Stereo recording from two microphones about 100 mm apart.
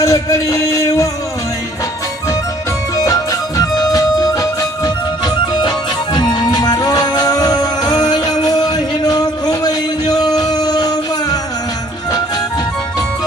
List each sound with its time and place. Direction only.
0.0 s music: 30° left (ahead or behind)
2.9 s music: 35° left (ahead or behind)